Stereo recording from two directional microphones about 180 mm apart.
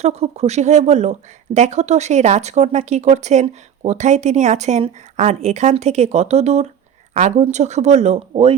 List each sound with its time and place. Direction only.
0.0 s speech: 35° right (ahead or behind)